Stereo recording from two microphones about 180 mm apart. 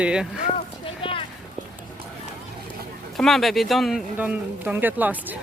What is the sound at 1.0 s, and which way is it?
Clip-clop, 30° left (ahead or behind).